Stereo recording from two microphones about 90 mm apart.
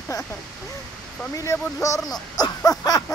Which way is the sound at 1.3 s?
40° left (ahead or behind).